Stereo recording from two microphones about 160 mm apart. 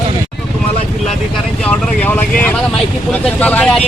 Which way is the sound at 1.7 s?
10° left (ahead or behind).